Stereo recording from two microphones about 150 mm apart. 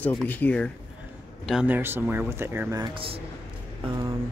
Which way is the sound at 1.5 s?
5° right (ahead or behind).